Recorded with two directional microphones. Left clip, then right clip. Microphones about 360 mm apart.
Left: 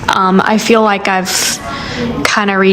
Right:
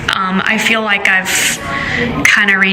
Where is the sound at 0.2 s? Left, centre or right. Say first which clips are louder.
Left 3 dB; centre.